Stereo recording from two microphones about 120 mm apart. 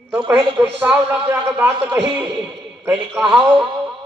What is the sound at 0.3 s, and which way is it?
A man's voice, 10° right (ahead or behind).